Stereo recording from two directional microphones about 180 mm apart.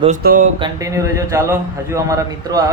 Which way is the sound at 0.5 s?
20° right (ahead or behind).